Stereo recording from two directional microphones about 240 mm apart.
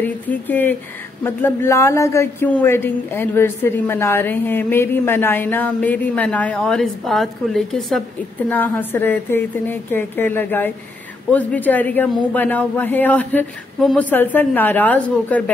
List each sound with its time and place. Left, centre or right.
0.0 s speech: centre